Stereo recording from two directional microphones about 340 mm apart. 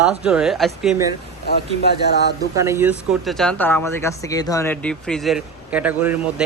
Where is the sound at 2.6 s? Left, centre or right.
Centre.